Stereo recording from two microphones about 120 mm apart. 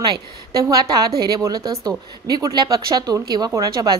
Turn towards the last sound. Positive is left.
turn(degrees=-30)  # may be behind; listen again after turning